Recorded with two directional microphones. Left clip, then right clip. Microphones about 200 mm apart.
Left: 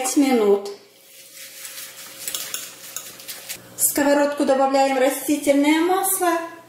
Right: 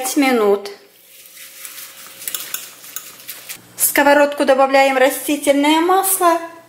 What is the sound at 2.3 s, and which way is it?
Stir, centre (ahead or behind).